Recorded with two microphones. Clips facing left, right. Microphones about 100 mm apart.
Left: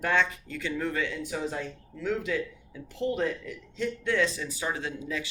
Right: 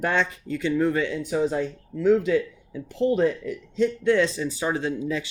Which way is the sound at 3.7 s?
30° right (ahead or behind).